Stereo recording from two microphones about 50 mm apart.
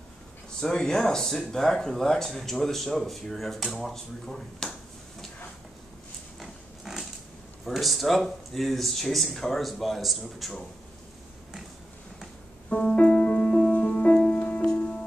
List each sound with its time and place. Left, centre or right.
0.6 s speech: centre
6.4 s pig: centre
7.6 s speech: centre
12.6 s music: centre
14.3 s music: left
14.6 s music: centre